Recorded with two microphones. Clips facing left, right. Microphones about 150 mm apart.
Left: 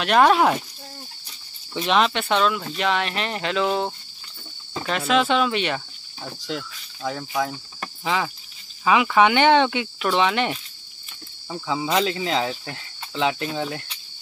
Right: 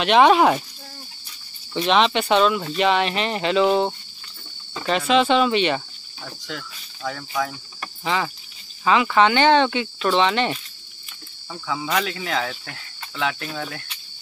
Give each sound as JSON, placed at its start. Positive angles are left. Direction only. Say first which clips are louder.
{"t": 0.0, "sound": "speech", "louder": "right 2 dB", "side_deg": 0}
{"t": 1.8, "sound": "speech", "louder": "right 2 dB", "side_deg": 0}
{"t": 6.2, "sound": "speech", "louder": "left 4 dB", "side_deg": 20}
{"t": 8.0, "sound": "cricket", "louder": "even", "side_deg": 5}
{"t": 8.8, "sound": "speech", "louder": "even", "side_deg": 10}
{"t": 11.5, "sound": "speech", "louder": "left 2 dB", "side_deg": 25}